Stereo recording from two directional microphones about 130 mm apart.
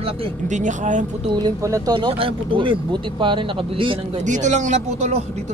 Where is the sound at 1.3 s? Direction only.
30° right (ahead or behind).